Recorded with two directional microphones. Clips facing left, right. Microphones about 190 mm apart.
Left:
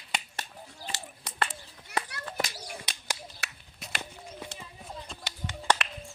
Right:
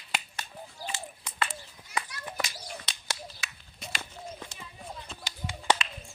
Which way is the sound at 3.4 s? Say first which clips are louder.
Left 1 dB; 70° left (ahead or behind).